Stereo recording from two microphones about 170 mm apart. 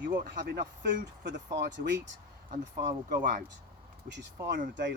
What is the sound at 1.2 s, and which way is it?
Speech, 90° right.